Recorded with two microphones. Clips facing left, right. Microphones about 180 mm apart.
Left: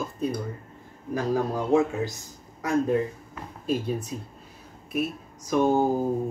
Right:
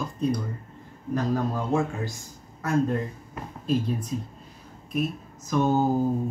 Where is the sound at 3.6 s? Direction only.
10° left (ahead or behind).